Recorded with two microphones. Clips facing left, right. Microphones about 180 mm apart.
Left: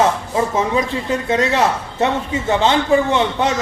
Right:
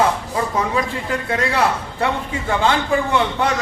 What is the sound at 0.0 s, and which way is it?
Speech, 20° left (ahead or behind).